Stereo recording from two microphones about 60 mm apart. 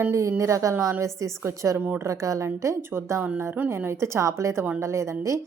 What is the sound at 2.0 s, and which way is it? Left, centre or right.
Speech, right.